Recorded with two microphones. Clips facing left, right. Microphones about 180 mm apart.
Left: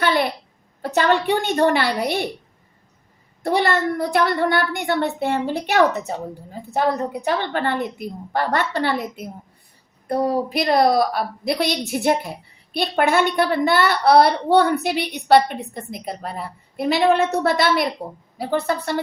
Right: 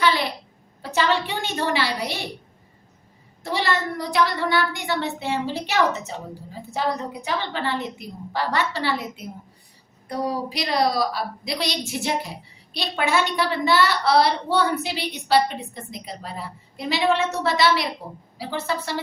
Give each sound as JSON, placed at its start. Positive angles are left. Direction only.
{"t": 0.0, "sound": "a sound", "side_deg": 55}
{"t": 0.8, "sound": "a woman's voice", "side_deg": 55}
{"t": 3.4, "sound": "a woman's voice", "side_deg": 55}